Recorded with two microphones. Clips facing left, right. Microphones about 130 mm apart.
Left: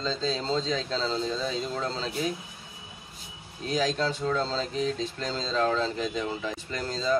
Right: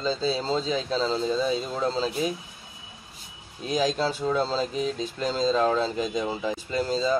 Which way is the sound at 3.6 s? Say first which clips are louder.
Right 2 dB; 15° right (ahead or behind).